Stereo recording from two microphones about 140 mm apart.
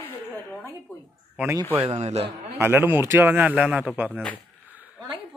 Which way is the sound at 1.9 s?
50° right (ahead or behind).